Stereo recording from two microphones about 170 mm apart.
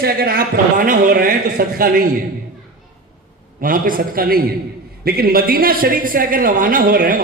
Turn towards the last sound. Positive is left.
turn(degrees=-55)  # may be behind; listen again after turning